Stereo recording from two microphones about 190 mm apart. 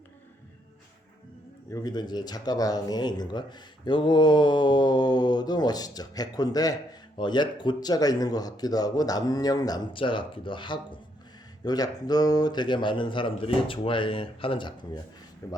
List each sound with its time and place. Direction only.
1.7 s speech: 20° left (ahead or behind)
15.4 s speech: 15° left (ahead or behind)